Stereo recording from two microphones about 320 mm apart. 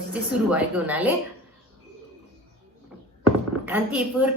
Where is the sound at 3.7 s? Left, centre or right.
Centre.